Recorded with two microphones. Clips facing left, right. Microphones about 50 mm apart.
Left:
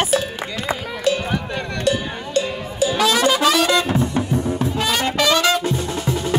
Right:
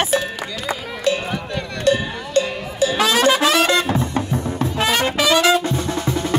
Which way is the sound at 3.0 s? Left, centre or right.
Right.